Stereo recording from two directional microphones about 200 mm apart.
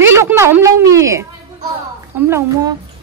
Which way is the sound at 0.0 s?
10° right (ahead or behind).